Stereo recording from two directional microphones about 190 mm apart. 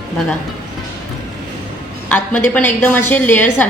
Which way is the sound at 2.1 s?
10° left (ahead or behind).